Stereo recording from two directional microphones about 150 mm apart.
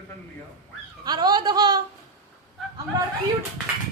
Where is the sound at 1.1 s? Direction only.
25° right (ahead or behind).